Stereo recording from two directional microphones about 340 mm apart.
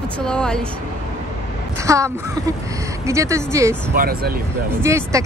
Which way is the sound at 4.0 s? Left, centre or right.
Right.